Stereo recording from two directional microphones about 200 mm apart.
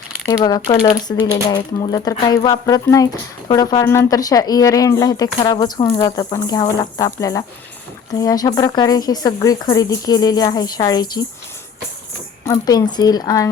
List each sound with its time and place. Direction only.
0.3 s speech: 20° left (ahead or behind)
12.5 s speech: 20° left (ahead or behind)